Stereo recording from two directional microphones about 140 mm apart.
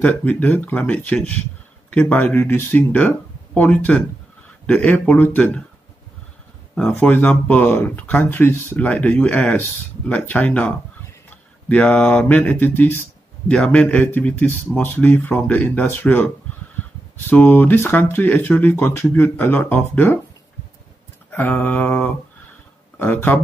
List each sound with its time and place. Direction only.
0.0 s speech: 10° left (ahead or behind)
6.7 s speech: 10° left (ahead or behind)
11.7 s speech: 10° left (ahead or behind)
17.3 s speech: 15° left (ahead or behind)
21.3 s speech: 15° left (ahead or behind)